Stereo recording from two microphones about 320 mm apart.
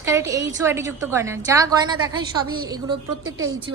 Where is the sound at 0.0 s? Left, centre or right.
Centre.